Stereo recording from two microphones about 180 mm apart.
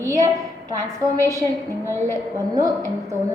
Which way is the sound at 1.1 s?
15° right (ahead or behind).